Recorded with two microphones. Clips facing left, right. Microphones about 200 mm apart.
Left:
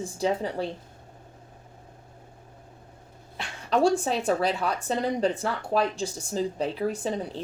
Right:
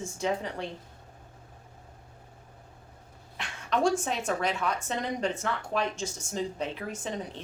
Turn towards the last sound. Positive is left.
turn(degrees=35)  # may be behind; listen again after turning